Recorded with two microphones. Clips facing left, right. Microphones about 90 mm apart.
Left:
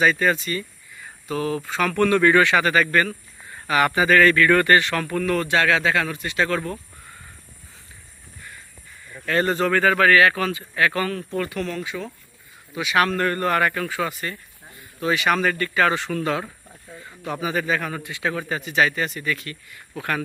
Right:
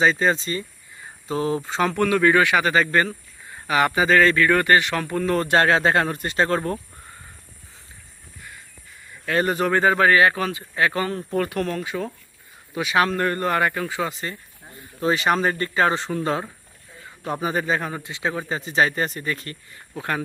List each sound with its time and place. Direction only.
0.0 s speech: 25° right (ahead or behind)
2.0 s a man's voice: 10° right (ahead or behind)
5.2 s a man's voice: 30° right (ahead or behind)
9.2 s speech: 10° right (ahead or behind)
11.4 s a man's voice: 45° right (ahead or behind)
13.0 s speech: 15° right (ahead or behind)
15.0 s a man's voice: 35° right (ahead or behind)
20.0 s speech: 20° right (ahead or behind)